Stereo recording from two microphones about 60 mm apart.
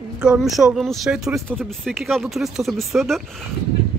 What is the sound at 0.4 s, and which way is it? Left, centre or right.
Speech, centre.